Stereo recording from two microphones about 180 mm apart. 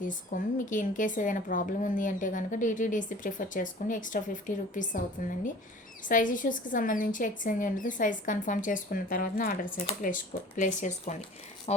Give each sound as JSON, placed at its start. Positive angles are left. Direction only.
{"t": 0.0, "sound": "a woman's voice", "side_deg": 45}